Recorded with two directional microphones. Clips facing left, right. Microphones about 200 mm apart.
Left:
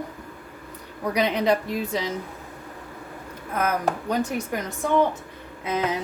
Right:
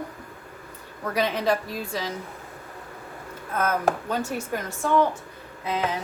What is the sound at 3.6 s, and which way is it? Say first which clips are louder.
A woman's voice: even; 15° left (ahead or behind).